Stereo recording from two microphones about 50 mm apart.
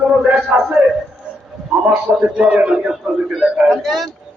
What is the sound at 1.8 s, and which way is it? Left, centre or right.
A man's voice, centre.